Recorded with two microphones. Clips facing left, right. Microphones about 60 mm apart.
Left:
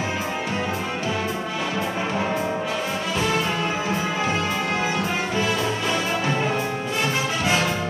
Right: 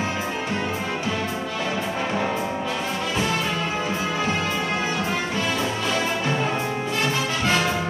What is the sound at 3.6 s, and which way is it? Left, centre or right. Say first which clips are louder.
Music: left 1 dB; centre.